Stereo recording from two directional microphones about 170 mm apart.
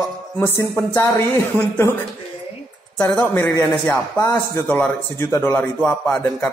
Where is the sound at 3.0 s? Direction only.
5° left (ahead or behind).